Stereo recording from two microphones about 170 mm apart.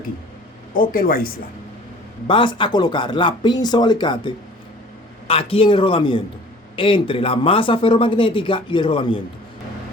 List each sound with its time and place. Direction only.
0.7 s speech: 55° left (ahead or behind)
2.2 s a man's voice: 30° left (ahead or behind)